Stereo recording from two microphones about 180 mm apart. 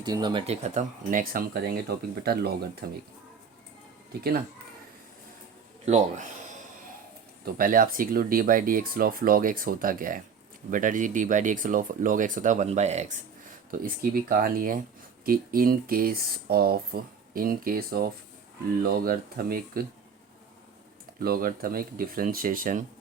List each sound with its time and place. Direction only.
0.0 s speech: 25° right (ahead or behind)
0.4 s speech: 35° right (ahead or behind); by 2.6 s 60° right (ahead or behind)
5.8 s speech: 40° right (ahead or behind)
7.4 s speech: 50° right (ahead or behind)
13.7 s speech: 50° right (ahead or behind)
21.2 s speech: 55° right (ahead or behind)